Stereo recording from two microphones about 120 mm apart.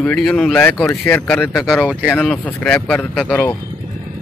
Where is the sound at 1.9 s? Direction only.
10° left (ahead or behind).